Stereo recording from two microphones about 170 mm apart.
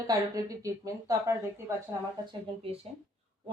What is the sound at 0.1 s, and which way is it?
A woman's voice, 20° right (ahead or behind).